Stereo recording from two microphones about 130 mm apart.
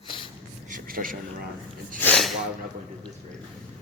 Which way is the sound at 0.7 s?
90° right.